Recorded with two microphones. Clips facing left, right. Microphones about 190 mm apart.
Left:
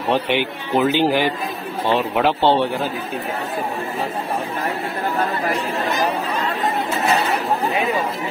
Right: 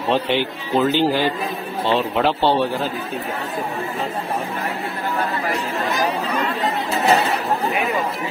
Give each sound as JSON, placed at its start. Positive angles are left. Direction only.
{"t": 0.1, "sound": "speech", "side_deg": 15}